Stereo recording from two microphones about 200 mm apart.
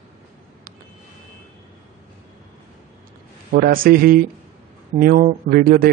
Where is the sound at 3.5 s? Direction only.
45° right (ahead or behind).